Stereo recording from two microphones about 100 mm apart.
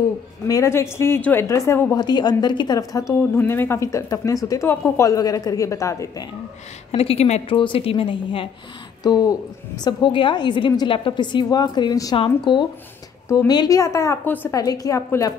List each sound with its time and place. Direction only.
0.5 s speech: 30° left (ahead or behind)
2.0 s a woman's voice: 45° left (ahead or behind)
3.3 s a woman's voice: 20° left (ahead or behind)
6.9 s a woman's voice: 80° left; by 8.5 s 60° left (ahead or behind)
9.0 s a woman's voice: 40° left (ahead or behind)
9.8 s a woman's voice: 50° left (ahead or behind)
12.2 s a woman's voice: 50° left (ahead or behind)
13.7 s a woman's voice: 30° left (ahead or behind)
14.2 s a woman's voice: 15° left (ahead or behind)
14.5 s a woman's voice: 35° left (ahead or behind)